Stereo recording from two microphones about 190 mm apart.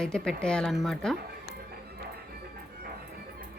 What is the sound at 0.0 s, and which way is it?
Speech, 5° left (ahead or behind).